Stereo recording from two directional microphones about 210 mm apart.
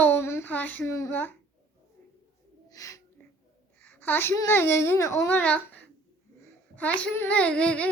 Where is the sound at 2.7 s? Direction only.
15° left (ahead or behind).